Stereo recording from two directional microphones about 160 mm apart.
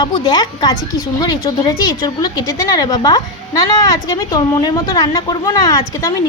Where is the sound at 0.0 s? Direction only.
25° left (ahead or behind).